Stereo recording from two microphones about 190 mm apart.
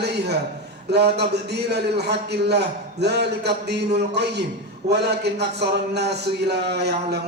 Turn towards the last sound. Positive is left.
turn(degrees=-60)  # may be behind; listen again after turning